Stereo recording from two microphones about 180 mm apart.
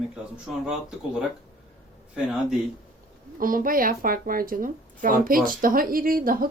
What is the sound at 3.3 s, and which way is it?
Speech, 50° right (ahead or behind).